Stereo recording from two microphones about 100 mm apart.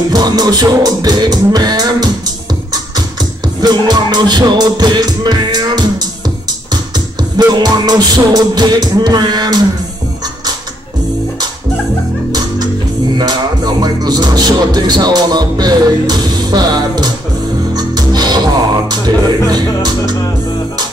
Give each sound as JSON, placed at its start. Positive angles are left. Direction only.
{"t": 0.1, "sound": "music", "side_deg": -40}
{"t": 7.3, "sound": "music", "side_deg": -40}
{"t": 12.3, "sound": "music", "side_deg": -40}